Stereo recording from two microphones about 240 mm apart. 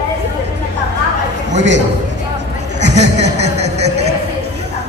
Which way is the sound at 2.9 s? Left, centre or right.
Right.